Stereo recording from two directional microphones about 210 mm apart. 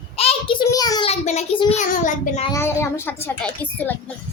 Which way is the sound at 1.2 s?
30° left (ahead or behind).